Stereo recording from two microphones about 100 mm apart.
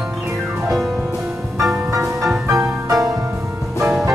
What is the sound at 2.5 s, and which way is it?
Music, 35° right (ahead or behind).